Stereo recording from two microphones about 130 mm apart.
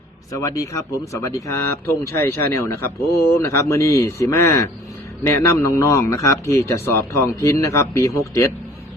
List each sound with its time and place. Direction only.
0.3 s speech: 25° left (ahead or behind)